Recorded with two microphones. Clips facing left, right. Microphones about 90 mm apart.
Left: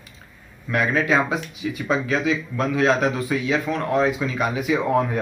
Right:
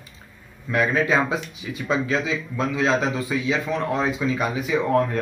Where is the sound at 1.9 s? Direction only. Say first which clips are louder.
Left 1 dB; centre (ahead or behind).